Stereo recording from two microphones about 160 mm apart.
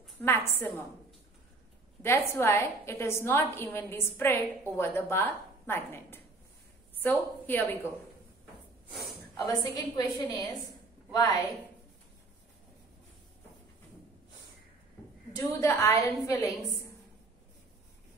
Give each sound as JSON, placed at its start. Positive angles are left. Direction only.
{"t": 0.2, "sound": "a woman's voice", "side_deg": 15}
{"t": 2.0, "sound": "a woman's voice", "side_deg": 15}
{"t": 8.9, "sound": "snort", "side_deg": 0}
{"t": 9.5, "sound": "a woman's voice", "side_deg": 25}
{"t": 15.3, "sound": "a woman's voice", "side_deg": 15}